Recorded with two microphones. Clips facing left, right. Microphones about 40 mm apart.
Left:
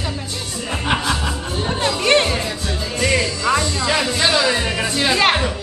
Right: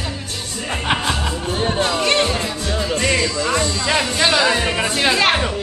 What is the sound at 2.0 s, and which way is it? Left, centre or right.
Music, centre.